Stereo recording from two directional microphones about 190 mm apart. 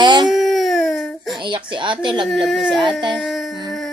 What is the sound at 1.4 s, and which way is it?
Speech, 25° right (ahead or behind).